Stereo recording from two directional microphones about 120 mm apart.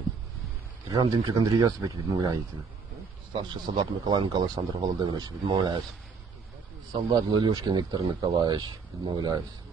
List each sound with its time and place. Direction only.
1.1 s speech: 30° right (ahead or behind)
6.9 s speech: 35° right (ahead or behind)